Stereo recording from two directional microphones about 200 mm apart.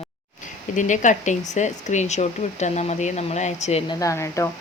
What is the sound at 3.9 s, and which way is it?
Speech, 15° left (ahead or behind).